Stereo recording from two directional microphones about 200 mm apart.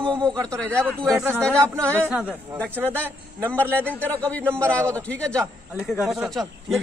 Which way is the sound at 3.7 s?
5° left (ahead or behind).